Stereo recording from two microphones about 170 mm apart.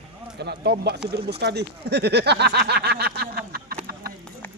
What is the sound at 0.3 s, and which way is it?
Speech, 75° right (ahead or behind).